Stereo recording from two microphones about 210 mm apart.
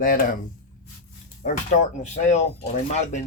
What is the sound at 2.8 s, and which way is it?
Speech, 30° left (ahead or behind).